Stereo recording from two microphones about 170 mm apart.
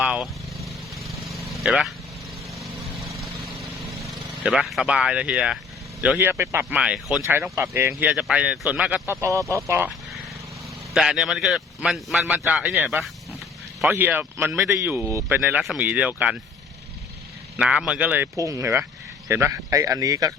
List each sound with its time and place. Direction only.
0.0 s vehicle: 5° right (ahead or behind)
3.3 s vehicle: centre (ahead or behind)
6.0 s speech: 10° right (ahead or behind)
10.9 s a man's voice: centre (ahead or behind)
17.6 s speech: 5° right (ahead or behind)